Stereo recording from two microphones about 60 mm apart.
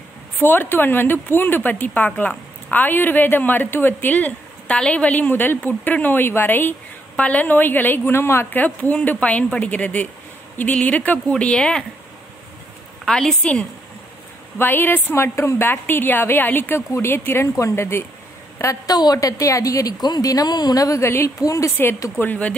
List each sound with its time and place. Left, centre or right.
0.4 s speech: left; by 11.8 s centre
13.0 s a woman's voice: centre
14.6 s speech: left
18.6 s a woman's voice: left
21.0 s speech: left
21.4 s a woman's voice: left
22.2 s speech: left